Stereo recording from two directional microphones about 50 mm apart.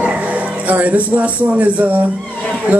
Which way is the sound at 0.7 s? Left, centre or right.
Right.